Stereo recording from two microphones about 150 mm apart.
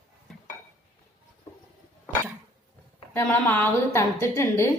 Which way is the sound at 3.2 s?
15° left (ahead or behind).